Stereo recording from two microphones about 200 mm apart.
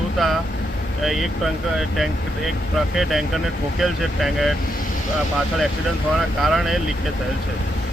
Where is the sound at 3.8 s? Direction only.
Centre (ahead or behind).